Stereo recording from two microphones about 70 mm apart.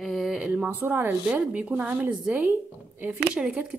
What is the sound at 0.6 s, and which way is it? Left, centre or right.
Speech, right.